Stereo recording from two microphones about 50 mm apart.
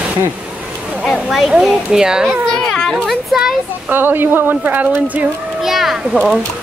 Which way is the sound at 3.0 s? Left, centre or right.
Centre.